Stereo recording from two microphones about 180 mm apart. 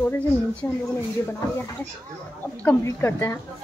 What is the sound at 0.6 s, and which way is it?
Speech, 10° left (ahead or behind).